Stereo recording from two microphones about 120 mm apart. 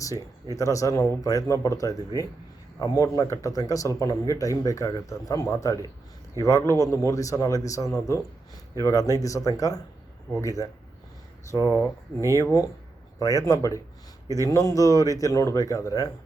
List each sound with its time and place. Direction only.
0.5 s speech: 25° left (ahead or behind)